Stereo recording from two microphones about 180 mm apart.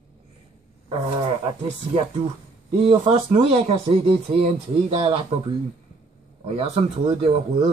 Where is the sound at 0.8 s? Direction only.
25° right (ahead or behind).